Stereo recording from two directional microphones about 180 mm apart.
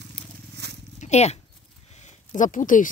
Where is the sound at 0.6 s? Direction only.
65° right (ahead or behind).